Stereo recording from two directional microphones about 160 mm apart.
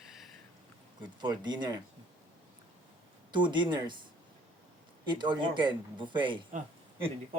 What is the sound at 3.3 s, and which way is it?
Speech, 30° right (ahead or behind).